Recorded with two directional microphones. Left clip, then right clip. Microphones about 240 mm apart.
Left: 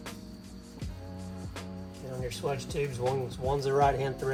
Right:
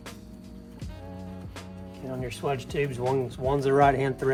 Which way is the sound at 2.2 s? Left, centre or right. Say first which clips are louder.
Right 3 dB; right.